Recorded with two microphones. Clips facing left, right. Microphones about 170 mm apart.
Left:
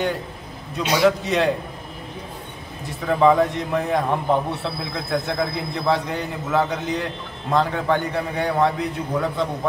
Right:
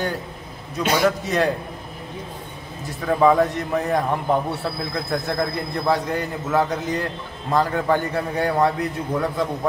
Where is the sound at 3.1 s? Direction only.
5° right (ahead or behind).